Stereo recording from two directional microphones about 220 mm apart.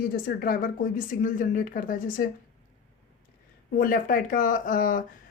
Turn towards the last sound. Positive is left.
turn(degrees=40)  # may be behind; listen again after turning